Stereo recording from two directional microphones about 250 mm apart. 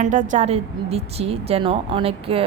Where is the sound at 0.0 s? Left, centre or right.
Right.